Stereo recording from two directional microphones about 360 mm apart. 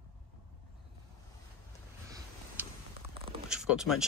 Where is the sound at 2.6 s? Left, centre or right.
Centre.